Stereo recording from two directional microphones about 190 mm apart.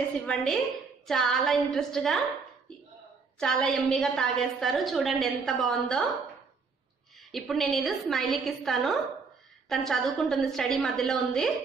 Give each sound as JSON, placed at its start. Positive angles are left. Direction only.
{"t": 0.3, "sound": "a woman's voice", "side_deg": 5}
{"t": 3.3, "sound": "a woman's voice", "side_deg": 5}
{"t": 7.2, "sound": "a woman's voice", "side_deg": 0}